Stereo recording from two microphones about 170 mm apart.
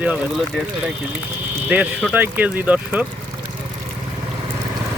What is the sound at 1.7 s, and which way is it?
Speech, 5° right (ahead or behind).